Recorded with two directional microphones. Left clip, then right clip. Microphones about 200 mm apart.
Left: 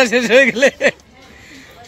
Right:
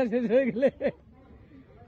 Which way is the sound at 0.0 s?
5° left (ahead or behind).